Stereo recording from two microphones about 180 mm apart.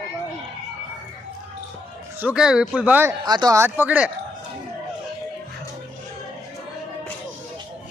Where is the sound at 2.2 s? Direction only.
5° right (ahead or behind).